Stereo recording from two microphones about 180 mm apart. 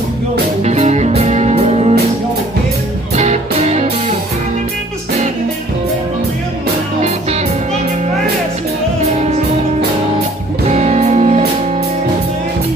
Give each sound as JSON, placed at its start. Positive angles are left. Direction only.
{"t": 0.7, "sound": "music", "side_deg": -40}
{"t": 3.2, "sound": "music", "side_deg": -40}
{"t": 10.7, "sound": "music", "side_deg": -35}